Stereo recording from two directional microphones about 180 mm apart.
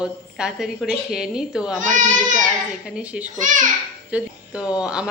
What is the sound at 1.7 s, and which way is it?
Speech, 45° right (ahead or behind).